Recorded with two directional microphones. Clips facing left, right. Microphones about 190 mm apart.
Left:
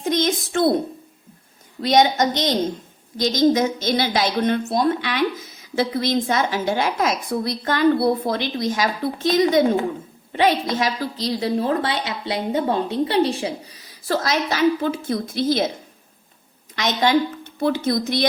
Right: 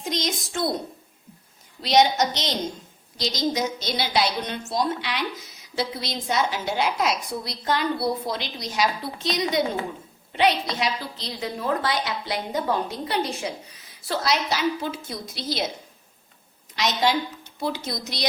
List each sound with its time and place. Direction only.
0.0 s a child's voice: 55° left (ahead or behind)
1.8 s a woman's voice: 50° left (ahead or behind)
11.2 s a woman's voice: 35° left (ahead or behind); by 15.7 s 50° left (ahead or behind)
16.7 s a woman's voice: 50° left (ahead or behind)